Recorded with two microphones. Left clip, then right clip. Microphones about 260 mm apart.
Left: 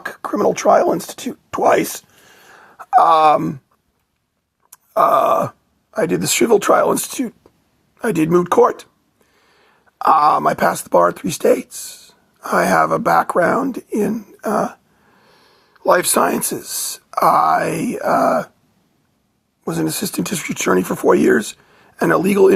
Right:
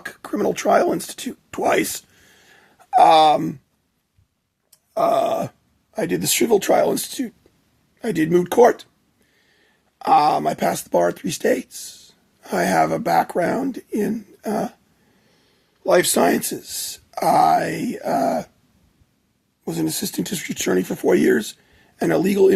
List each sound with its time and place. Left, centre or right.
0.0 s speech: centre
4.7 s groan: left
5.9 s speech: centre
10.0 s speech: left
15.8 s speech: left
19.6 s speech: centre